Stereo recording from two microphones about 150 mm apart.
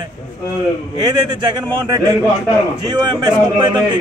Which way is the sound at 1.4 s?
25° right (ahead or behind).